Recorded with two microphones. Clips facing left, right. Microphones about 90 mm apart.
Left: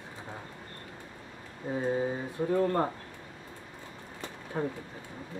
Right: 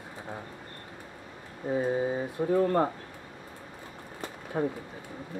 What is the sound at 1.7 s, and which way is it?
Speech, 15° right (ahead or behind).